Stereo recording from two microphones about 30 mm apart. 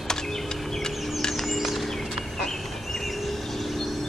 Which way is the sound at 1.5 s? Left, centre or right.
Centre.